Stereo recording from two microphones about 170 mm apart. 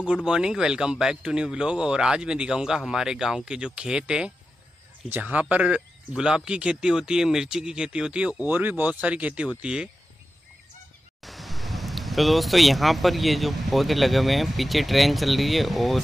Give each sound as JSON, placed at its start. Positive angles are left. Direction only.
{"t": 0.0, "sound": "speech", "side_deg": -5}
{"t": 11.2, "sound": "speech", "side_deg": 0}